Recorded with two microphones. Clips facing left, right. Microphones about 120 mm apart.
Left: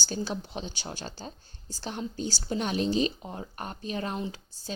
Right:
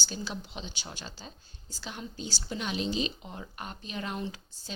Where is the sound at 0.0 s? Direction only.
40° left (ahead or behind).